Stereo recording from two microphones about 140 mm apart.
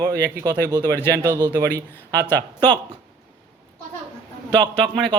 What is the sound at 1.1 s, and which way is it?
Speech, 25° right (ahead or behind).